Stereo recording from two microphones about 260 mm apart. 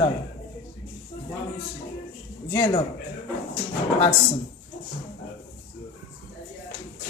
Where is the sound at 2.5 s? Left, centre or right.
Centre.